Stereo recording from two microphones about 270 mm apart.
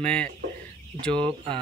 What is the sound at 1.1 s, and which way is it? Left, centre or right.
Speech, centre.